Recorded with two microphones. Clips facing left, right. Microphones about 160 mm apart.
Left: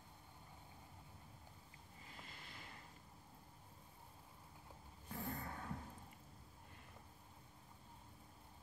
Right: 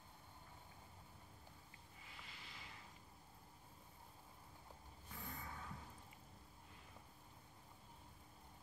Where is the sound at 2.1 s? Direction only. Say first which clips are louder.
Left 2 dB; 45° left (ahead or behind).